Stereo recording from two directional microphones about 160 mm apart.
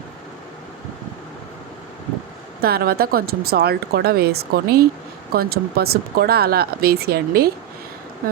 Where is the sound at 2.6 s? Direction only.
75° right (ahead or behind).